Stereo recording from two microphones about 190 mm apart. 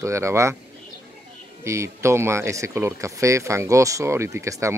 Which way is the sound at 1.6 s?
15° right (ahead or behind).